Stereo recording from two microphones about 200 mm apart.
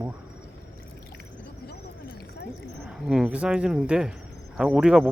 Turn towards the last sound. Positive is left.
turn(degrees=-5)  # may be behind; listen again after turning